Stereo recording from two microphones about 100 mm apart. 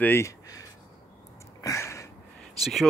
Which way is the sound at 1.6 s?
30° left (ahead or behind).